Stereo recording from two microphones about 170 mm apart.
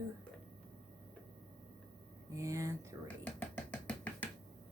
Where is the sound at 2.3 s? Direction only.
20° right (ahead or behind).